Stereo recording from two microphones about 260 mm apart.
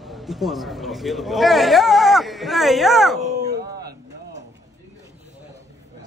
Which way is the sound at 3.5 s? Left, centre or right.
Right.